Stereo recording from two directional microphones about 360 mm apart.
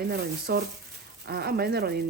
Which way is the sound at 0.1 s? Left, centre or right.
Right.